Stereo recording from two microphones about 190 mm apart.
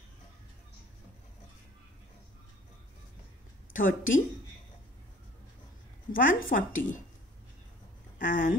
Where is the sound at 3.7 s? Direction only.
45° left (ahead or behind).